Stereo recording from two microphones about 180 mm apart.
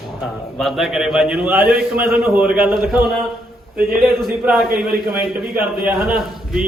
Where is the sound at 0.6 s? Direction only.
Centre (ahead or behind).